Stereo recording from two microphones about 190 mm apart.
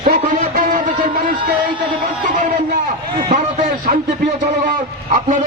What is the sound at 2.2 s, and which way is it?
Music, 45° right (ahead or behind).